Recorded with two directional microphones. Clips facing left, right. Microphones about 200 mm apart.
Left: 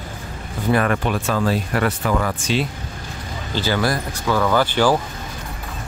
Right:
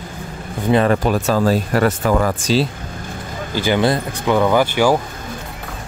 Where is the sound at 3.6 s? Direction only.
20° right (ahead or behind).